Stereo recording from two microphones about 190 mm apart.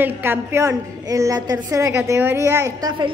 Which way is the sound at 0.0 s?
10° right (ahead or behind).